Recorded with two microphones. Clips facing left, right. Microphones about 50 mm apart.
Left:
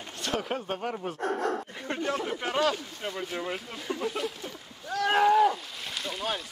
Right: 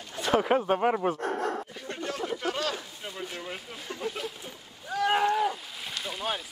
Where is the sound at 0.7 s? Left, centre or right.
Right.